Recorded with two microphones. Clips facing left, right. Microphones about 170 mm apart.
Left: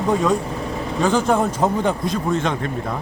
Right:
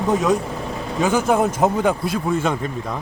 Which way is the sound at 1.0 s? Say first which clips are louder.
Even; 5° right (ahead or behind).